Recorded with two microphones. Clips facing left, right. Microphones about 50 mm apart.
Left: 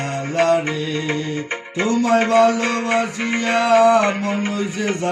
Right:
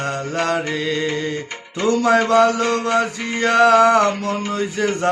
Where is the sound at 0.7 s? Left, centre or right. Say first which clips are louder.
Right 1 dB; right.